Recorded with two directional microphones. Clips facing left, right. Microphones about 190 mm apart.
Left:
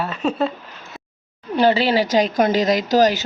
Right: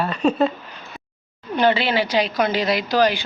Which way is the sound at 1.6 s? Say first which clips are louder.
Left 2 dB; 35° left (ahead or behind).